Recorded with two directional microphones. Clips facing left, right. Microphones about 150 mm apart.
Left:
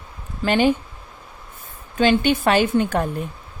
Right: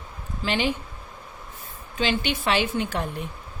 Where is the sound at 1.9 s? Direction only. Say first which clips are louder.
Left 8 dB; 50° left (ahead or behind).